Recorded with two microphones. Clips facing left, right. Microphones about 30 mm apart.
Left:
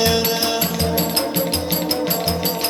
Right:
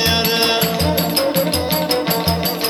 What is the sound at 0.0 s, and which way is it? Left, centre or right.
Music, right.